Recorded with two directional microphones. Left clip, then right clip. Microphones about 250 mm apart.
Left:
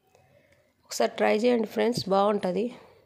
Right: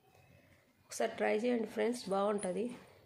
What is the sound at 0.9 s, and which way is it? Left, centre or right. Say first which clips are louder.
Speech: left 10 dB; left.